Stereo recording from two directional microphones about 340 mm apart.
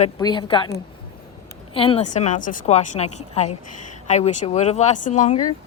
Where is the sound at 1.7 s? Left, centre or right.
Centre.